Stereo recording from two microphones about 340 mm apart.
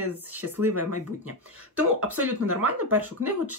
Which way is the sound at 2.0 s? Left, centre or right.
Right.